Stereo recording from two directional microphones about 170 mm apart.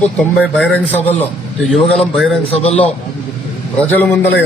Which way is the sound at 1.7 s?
Centre (ahead or behind).